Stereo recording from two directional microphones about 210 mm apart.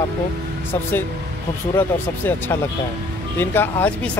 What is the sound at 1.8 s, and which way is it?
Speech, 10° left (ahead or behind).